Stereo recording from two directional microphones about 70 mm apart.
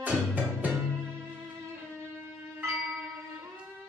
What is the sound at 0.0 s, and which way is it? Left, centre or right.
Music, right.